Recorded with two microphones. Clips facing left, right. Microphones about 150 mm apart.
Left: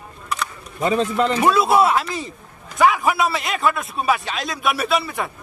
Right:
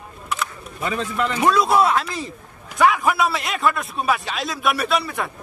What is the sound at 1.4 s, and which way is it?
A man's voice, 5° left (ahead or behind).